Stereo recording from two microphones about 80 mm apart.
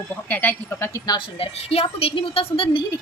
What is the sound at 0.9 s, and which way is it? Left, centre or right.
Speech, left.